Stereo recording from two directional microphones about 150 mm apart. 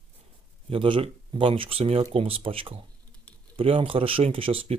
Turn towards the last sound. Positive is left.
turn(degrees=-35)  # may be behind; listen again after turning